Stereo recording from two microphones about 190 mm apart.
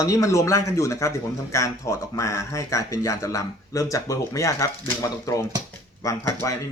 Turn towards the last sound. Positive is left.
turn(degrees=20)  # may be behind; listen again after turning